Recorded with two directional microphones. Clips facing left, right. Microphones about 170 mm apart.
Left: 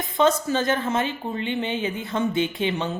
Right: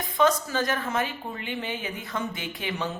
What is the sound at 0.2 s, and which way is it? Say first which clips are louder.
A woman's voice: left 3 dB; 25° left (ahead or behind).